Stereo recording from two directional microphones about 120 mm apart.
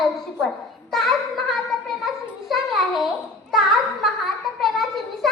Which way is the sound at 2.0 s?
Centre (ahead or behind).